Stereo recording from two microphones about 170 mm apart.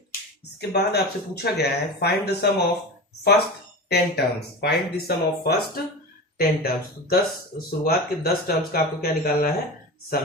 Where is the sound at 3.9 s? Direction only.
75° left (ahead or behind).